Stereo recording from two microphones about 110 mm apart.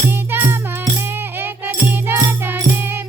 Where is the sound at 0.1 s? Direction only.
20° right (ahead or behind).